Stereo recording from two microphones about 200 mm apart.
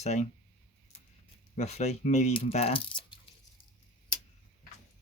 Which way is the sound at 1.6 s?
35° left (ahead or behind).